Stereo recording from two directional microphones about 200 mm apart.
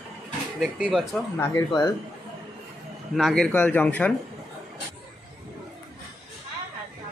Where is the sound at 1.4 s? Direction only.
15° left (ahead or behind).